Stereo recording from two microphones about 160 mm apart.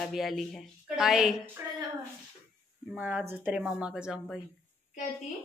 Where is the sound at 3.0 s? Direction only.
10° right (ahead or behind).